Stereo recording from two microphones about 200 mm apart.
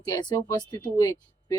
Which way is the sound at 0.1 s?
20° left (ahead or behind).